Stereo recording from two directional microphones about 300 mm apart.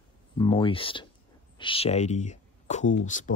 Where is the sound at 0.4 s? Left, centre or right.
Centre.